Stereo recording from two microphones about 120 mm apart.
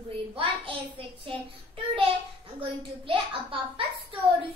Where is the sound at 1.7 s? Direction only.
50° right (ahead or behind).